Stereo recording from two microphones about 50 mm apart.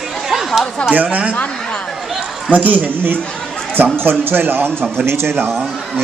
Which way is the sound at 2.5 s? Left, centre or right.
Right.